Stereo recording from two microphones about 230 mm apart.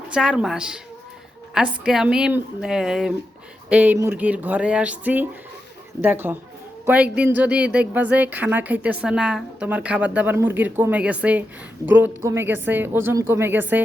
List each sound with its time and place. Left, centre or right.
0.1 s a woman's voice: centre